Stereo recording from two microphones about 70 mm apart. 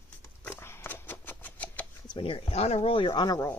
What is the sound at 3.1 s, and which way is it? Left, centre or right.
Speech, left.